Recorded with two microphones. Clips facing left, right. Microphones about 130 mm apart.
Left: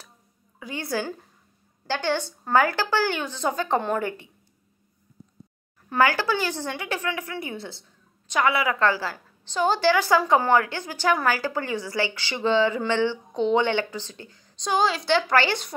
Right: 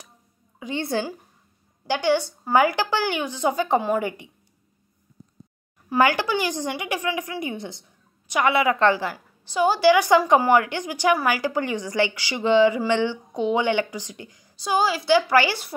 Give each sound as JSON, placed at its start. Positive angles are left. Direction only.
{"t": 0.6, "sound": "a woman's voice", "side_deg": -25}
{"t": 1.9, "sound": "a woman's voice", "side_deg": -15}
{"t": 5.9, "sound": "a woman's voice", "side_deg": -15}